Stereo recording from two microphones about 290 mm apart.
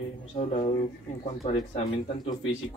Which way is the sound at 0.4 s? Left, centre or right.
Left.